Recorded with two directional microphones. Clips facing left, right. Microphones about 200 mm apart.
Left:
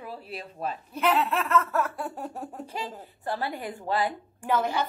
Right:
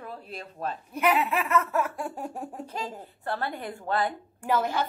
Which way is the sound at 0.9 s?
10° right (ahead or behind).